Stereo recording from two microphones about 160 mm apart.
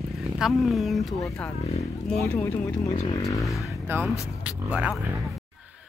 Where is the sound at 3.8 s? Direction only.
15° right (ahead or behind).